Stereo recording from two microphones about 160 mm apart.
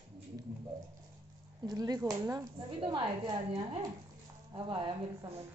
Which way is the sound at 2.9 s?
30° right (ahead or behind).